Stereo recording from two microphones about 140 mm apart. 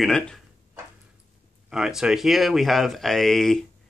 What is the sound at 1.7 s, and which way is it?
Speech, 5° right (ahead or behind).